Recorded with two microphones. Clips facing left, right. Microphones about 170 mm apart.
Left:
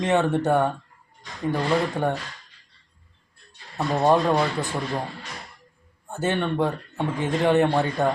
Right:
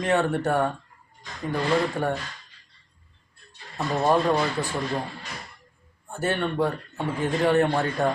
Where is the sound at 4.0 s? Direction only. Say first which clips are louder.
Left 2 dB; 20° left (ahead or behind).